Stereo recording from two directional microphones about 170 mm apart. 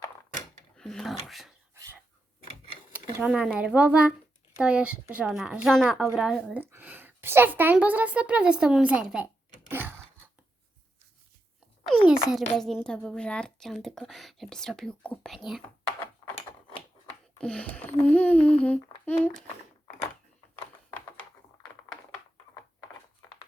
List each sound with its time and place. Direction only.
0.8 s a child's voice: centre (ahead or behind)
1.7 s a sound: 15° right (ahead or behind)
3.2 s a woman's voice: 5° right (ahead or behind)
9.0 s cash register: 10° right (ahead or behind)
11.9 s a child's voice: 5° right (ahead or behind)
17.1 s a sound: 5° left (ahead or behind)